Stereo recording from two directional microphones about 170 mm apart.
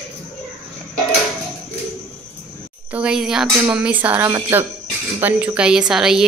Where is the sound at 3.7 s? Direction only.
10° right (ahead or behind).